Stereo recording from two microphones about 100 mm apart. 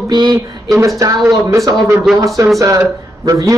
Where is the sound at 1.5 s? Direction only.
30° right (ahead or behind).